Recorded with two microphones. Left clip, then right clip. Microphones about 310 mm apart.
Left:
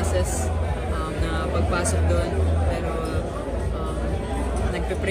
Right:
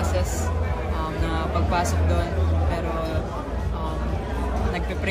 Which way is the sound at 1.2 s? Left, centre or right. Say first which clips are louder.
Left 1 dB; centre.